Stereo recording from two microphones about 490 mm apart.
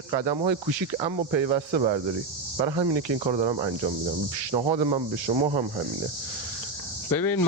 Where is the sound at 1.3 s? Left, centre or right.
Right.